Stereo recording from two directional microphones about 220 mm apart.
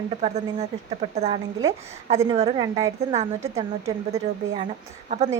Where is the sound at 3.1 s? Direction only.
30° right (ahead or behind).